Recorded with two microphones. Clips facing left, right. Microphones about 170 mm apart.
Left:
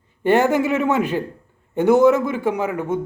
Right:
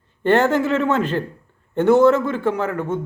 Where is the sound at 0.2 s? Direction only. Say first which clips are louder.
Even; 10° left (ahead or behind).